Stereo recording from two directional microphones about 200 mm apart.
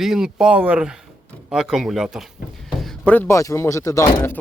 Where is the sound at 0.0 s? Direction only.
Centre (ahead or behind).